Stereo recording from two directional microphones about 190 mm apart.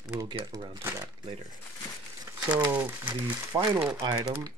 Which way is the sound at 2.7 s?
10° right (ahead or behind).